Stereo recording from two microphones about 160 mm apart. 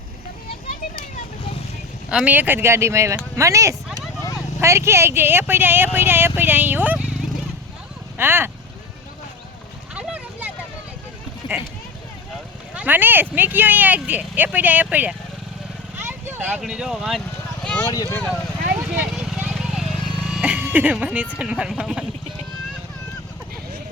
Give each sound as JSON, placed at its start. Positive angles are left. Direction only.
{"t": 2.0, "sound": "speech", "side_deg": -5}
{"t": 8.2, "sound": "speech", "side_deg": -15}
{"t": 9.9, "sound": "a sound", "side_deg": -5}
{"t": 12.7, "sound": "speech", "side_deg": -10}
{"t": 16.0, "sound": "vehicle", "side_deg": -15}
{"t": 17.8, "sound": "speech", "side_deg": 20}
{"t": 19.1, "sound": "vehicle", "side_deg": 0}
{"t": 21.3, "sound": "speech", "side_deg": -5}